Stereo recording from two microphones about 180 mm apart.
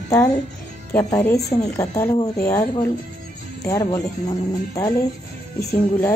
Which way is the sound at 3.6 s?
20° left (ahead or behind).